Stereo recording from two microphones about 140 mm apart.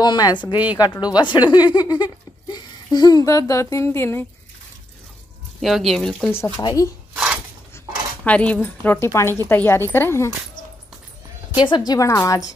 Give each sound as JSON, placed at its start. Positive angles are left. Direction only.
{"t": 0.0, "sound": "a woman's voice", "side_deg": 30}
{"t": 5.6, "sound": "speech", "side_deg": 0}
{"t": 6.5, "sound": "a woman's voice", "side_deg": 30}
{"t": 8.2, "sound": "a woman's voice", "side_deg": 10}
{"t": 11.6, "sound": "speech", "side_deg": 30}